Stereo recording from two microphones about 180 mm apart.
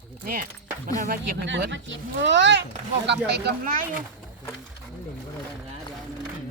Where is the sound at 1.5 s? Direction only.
80° right.